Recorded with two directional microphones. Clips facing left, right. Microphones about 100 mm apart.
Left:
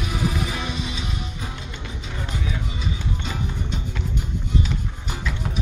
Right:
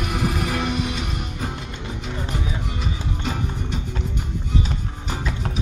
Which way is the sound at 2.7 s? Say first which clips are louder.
Right 1 dB; 55° right (ahead or behind).